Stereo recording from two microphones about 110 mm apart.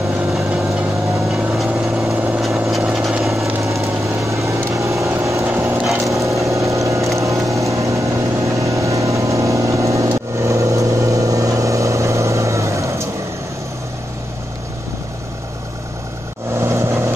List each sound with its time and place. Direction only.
0.3 s vehicle: 5° right (ahead or behind)
4.3 s vehicle: 25° right (ahead or behind)
5.9 s wood: 30° right (ahead or behind)
6.4 s vehicle: 30° right (ahead or behind)
16.5 s vehicle: 25° right (ahead or behind)